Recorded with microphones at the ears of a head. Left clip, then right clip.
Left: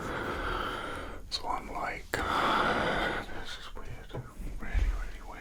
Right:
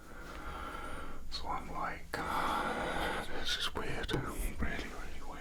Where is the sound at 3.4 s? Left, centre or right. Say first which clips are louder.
Right 7 dB; right.